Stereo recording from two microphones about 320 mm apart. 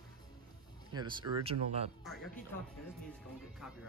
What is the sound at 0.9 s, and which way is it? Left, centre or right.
Speech, centre.